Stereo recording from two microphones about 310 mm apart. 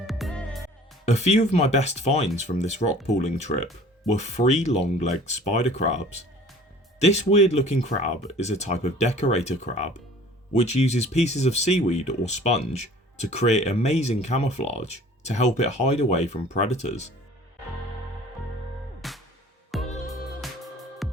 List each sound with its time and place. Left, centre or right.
0.1 s music: centre
1.0 s speech: left
19.0 s music: centre